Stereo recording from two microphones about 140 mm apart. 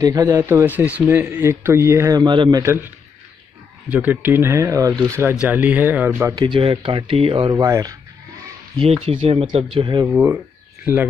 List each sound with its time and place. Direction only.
0.0 s speech: 25° right (ahead or behind)
2.6 s speech: 15° right (ahead or behind)
3.9 s speech: 15° right (ahead or behind)
5.3 s speech: 10° right (ahead or behind)
6.3 s speech: 35° right (ahead or behind)
7.6 s speech: 25° right (ahead or behind)
8.7 s speech: 45° right (ahead or behind)
10.1 s speech: 15° right (ahead or behind)